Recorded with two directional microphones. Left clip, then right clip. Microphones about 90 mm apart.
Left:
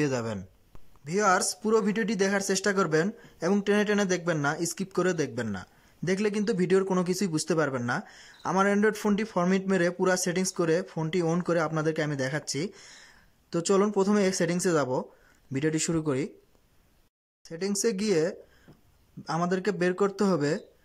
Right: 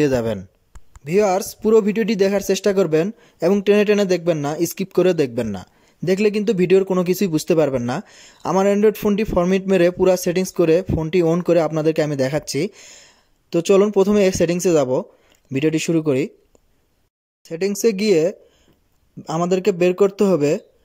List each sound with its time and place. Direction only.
0.0 s speech: 40° right (ahead or behind)
17.5 s speech: 35° right (ahead or behind)